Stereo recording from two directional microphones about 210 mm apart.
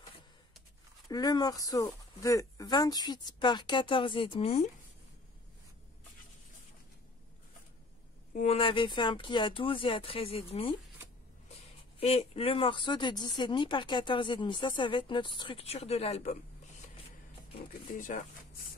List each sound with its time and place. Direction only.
1.0 s speech: 20° left (ahead or behind)
8.4 s speech: 30° left (ahead or behind)
12.0 s speech: 30° left (ahead or behind)
17.9 s speech: 40° left (ahead or behind)